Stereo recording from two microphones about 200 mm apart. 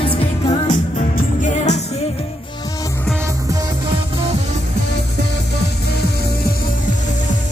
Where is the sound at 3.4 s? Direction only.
15° right (ahead or behind).